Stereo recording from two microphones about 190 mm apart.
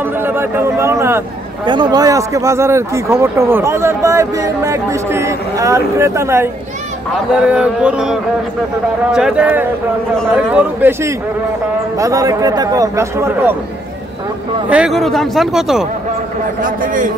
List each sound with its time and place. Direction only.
0.0 s speech: 10° right (ahead or behind)
14.7 s speech: centre (ahead or behind)
16.6 s a man's voice: 45° right (ahead or behind)